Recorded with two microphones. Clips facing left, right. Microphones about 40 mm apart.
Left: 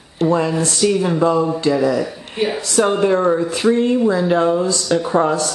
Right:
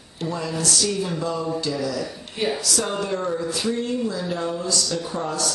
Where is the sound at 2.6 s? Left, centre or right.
Left.